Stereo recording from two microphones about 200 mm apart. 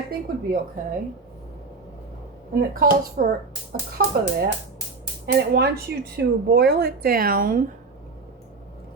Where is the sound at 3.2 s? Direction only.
50° right (ahead or behind).